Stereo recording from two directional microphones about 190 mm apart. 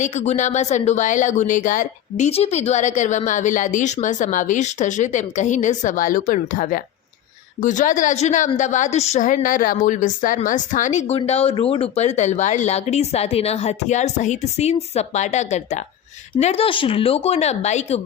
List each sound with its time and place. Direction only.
0.0 s speech: 35° left (ahead or behind)